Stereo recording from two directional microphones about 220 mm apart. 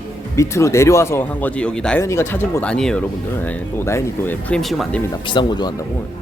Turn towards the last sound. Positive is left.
turn(degrees=20)  # may be behind; listen again after turning